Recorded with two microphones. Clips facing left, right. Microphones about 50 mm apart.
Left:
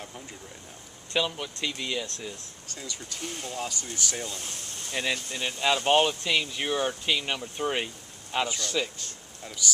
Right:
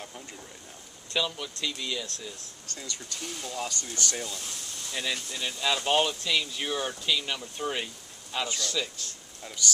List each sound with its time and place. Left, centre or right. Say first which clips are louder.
1.1 s speech: left 2 dB; centre
2.7 s speech: even; centre
3.2 s speech: left 1 dB; left
3.9 s speech: even; centre
4.3 s a sound: left 1 dB; left
4.9 s speech: left 3 dB; left